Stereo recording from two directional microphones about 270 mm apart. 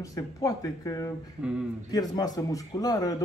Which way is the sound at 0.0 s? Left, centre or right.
Centre.